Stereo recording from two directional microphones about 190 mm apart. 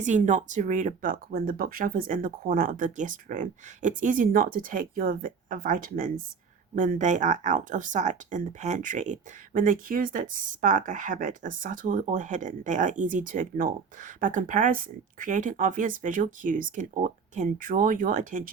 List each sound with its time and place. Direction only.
0.0 s speech: 40° right (ahead or behind)